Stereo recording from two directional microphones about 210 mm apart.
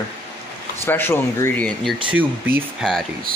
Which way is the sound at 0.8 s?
10° left (ahead or behind).